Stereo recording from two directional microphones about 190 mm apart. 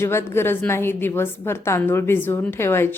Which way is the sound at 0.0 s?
15° left (ahead or behind).